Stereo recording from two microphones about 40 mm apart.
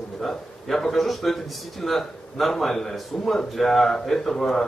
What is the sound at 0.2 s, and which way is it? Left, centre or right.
A man's voice, centre.